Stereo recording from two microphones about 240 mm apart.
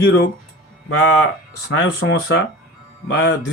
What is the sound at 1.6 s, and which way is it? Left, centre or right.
Speech, left.